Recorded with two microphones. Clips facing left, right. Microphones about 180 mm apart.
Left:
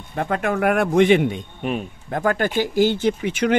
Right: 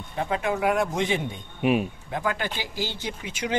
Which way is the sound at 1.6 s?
5° right (ahead or behind).